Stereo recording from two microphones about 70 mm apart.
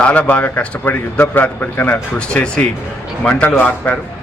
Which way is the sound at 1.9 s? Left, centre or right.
Centre.